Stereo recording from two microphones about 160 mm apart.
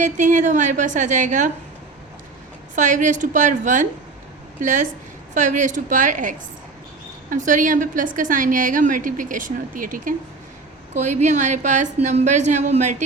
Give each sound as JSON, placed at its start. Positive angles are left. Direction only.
{"t": 0.0, "sound": "a woman's voice", "side_deg": -50}
{"t": 2.7, "sound": "a woman's voice", "side_deg": -50}